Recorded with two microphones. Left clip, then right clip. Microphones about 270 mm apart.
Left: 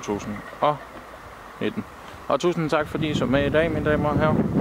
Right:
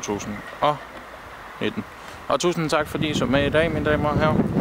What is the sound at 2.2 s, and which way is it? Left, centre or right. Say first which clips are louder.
Speech: right 1 dB; centre.